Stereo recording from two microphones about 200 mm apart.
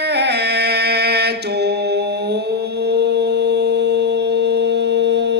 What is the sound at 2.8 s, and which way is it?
Mantra, 55° right (ahead or behind).